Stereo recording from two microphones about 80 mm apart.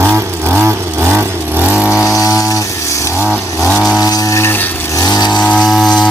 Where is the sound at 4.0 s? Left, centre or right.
Left.